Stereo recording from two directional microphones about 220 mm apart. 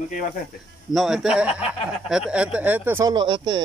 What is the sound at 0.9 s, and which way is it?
A man's voice, centre (ahead or behind).